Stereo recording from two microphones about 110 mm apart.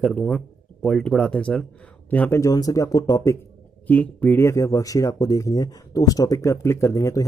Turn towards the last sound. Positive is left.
turn(degrees=30)  # may be behind; listen again after turning